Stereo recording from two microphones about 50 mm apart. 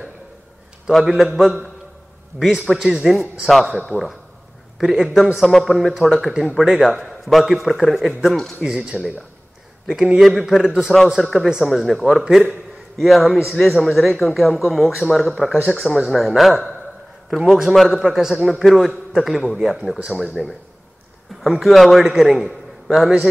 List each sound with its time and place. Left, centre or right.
0.9 s a man's voice: centre
4.7 s a man's voice: centre
8.6 s a man's voice: centre
21.4 s a man's voice: centre